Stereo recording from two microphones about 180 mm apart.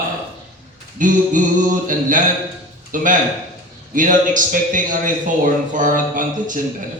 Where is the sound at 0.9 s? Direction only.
45° right (ahead or behind).